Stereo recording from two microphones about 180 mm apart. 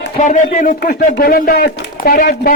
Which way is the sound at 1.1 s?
60° left (ahead or behind).